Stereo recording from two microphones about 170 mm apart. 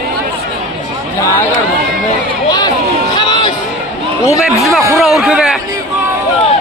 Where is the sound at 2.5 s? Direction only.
25° left (ahead or behind).